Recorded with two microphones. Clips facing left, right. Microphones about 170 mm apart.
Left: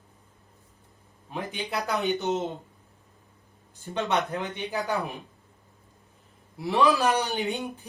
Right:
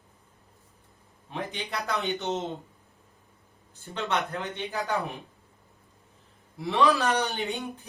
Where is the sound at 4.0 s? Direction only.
15° left (ahead or behind).